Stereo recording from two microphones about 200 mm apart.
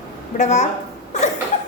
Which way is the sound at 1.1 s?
35° left (ahead or behind).